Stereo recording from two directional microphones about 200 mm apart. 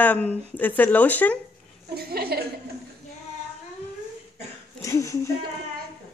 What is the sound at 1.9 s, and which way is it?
Speech, 50° right (ahead or behind).